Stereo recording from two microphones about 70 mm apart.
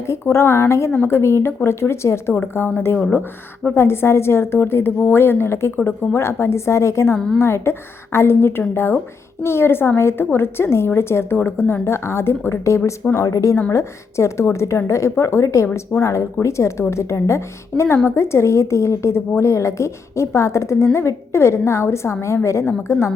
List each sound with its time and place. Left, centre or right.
0.1 s a woman's voice: left
2.4 s a woman's voice: left